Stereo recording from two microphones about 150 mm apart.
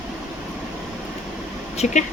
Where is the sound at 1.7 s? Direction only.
50° left (ahead or behind).